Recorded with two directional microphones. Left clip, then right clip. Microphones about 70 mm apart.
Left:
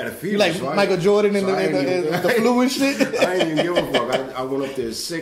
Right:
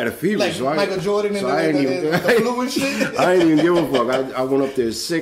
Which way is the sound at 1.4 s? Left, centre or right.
Right.